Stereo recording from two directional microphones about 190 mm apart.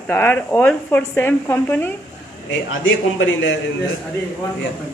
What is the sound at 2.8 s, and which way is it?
Speech, 85° left.